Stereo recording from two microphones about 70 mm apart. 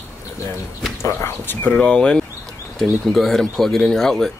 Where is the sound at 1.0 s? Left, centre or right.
Left.